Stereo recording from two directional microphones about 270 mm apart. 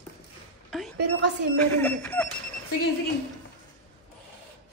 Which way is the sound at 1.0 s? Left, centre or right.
Right.